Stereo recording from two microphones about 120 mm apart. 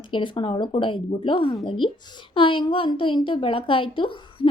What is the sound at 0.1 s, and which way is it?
A woman's voice, 45° left (ahead or behind).